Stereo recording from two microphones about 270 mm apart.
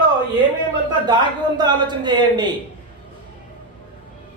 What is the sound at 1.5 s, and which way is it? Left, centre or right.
Speech, centre.